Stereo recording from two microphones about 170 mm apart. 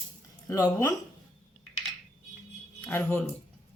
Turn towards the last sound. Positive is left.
turn(degrees=10)  # may be behind; listen again after turning